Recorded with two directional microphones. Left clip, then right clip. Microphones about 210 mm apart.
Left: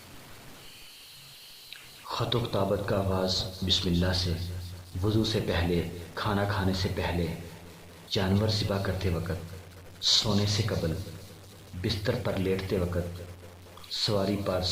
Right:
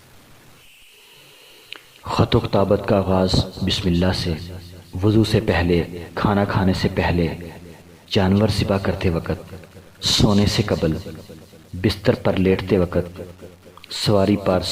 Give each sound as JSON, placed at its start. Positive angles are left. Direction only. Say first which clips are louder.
{"t": 1.7, "sound": "a man's voice", "louder": "right 11 dB", "side_deg": -35}